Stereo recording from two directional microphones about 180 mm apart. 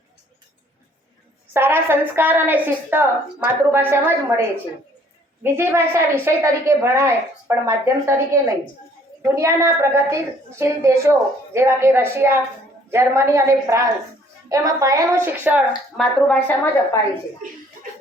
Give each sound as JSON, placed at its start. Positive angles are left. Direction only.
{"t": 1.5, "sound": "a woman's voice", "side_deg": -10}
{"t": 16.2, "sound": "a woman's voice", "side_deg": 5}